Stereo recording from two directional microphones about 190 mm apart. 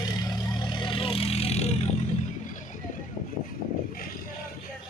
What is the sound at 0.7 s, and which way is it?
Vehicle, 25° left (ahead or behind).